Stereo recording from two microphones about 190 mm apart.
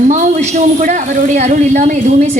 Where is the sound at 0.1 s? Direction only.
40° right (ahead or behind).